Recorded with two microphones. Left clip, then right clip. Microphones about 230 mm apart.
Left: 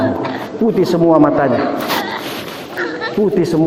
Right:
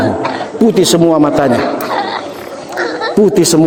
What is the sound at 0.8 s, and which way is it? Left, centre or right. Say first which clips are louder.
Speech: right 1 dB; right.